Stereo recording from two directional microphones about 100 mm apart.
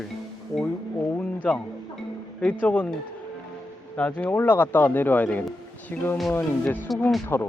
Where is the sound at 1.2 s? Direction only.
10° left (ahead or behind).